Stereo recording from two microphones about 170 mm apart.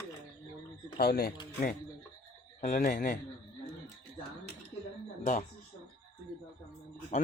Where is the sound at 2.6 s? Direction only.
55° left (ahead or behind).